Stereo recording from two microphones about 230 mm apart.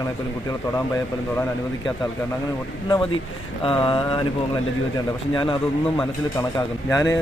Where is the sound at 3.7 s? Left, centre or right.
Left.